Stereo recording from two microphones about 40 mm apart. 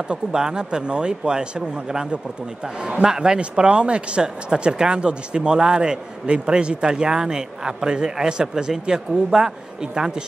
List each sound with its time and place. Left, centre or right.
0.1 s speech: centre
2.6 s speech: right